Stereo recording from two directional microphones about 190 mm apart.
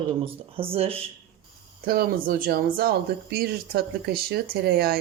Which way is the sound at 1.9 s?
50° right (ahead or behind).